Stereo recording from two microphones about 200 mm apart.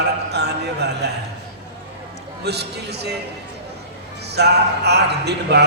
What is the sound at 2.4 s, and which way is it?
Speech, 55° right (ahead or behind).